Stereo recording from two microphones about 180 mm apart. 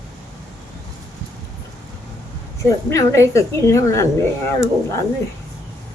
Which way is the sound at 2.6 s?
15° left (ahead or behind).